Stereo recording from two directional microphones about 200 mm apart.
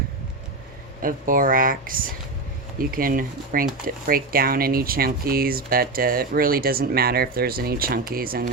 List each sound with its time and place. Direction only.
1.0 s speech: 45° right (ahead or behind)